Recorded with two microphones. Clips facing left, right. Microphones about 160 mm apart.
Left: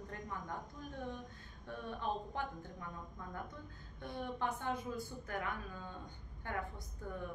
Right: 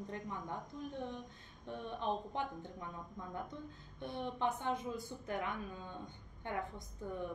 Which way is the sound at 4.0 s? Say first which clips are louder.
Right 1 dB; 20° right (ahead or behind).